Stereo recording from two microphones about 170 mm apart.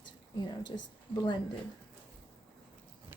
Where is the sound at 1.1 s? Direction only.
25° left (ahead or behind).